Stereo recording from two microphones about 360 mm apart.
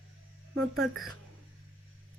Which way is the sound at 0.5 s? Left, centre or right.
Right.